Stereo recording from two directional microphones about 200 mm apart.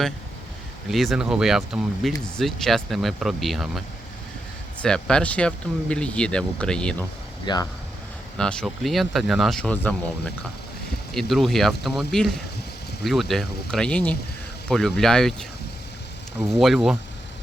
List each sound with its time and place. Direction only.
0.9 s speech: centre (ahead or behind)
7.4 s speech: 20° left (ahead or behind)
8.4 s speech: 5° left (ahead or behind)